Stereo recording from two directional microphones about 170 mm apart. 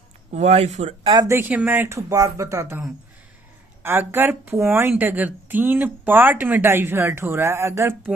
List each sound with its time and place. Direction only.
0.3 s speech: 40° right (ahead or behind)
1.1 s speech: 20° right (ahead or behind)
3.8 s speech: 10° right (ahead or behind)